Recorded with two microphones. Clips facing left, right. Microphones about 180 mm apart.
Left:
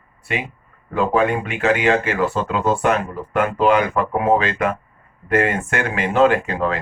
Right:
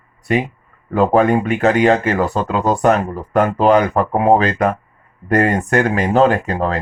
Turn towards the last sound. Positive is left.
turn(degrees=-40)  # may be behind; listen again after turning